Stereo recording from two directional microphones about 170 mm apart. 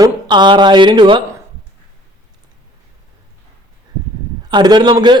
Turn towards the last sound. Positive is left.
turn(degrees=-25)  # may be behind; listen again after turning